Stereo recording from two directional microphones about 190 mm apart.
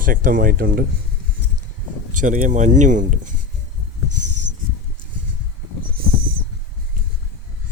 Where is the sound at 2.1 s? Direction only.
45° right (ahead or behind).